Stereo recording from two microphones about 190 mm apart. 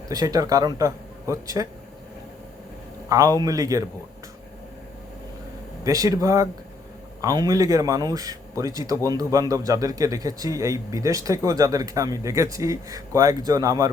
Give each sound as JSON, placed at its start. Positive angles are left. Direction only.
{"t": 0.1, "sound": "speech", "side_deg": -20}
{"t": 3.1, "sound": "a man's voice", "side_deg": -20}
{"t": 5.8, "sound": "a man's voice", "side_deg": -15}